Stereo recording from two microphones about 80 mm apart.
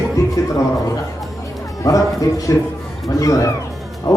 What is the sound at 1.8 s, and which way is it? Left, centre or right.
A man's voice, left.